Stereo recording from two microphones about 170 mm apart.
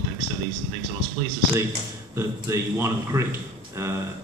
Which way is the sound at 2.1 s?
15° right (ahead or behind).